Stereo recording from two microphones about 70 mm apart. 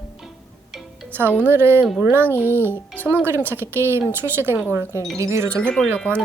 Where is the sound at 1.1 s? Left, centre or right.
Right.